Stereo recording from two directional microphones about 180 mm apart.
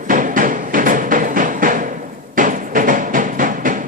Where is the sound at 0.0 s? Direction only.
45° right (ahead or behind).